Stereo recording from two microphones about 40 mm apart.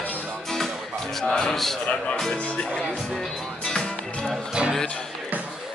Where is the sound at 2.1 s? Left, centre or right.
Centre.